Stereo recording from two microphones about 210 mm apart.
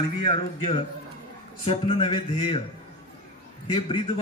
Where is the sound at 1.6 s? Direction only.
25° left (ahead or behind).